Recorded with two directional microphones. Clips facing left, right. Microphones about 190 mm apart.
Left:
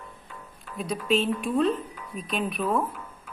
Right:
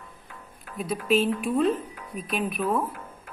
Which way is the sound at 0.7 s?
5° right (ahead or behind).